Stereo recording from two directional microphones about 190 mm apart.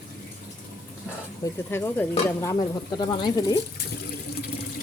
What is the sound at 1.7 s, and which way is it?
Speech, 10° left (ahead or behind).